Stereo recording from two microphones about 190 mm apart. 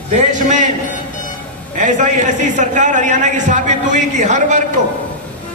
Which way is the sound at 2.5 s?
40° right (ahead or behind).